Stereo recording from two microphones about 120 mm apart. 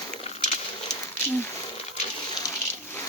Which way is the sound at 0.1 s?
85° left.